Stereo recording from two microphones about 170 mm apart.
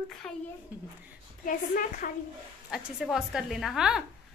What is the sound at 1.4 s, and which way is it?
Speech, 55° left (ahead or behind).